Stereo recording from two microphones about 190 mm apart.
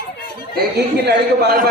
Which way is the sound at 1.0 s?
55° right (ahead or behind).